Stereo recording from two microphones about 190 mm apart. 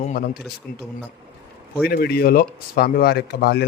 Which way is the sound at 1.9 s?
55° left (ahead or behind).